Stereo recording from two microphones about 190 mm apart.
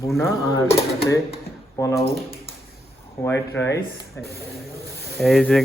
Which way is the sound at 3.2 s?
10° left (ahead or behind).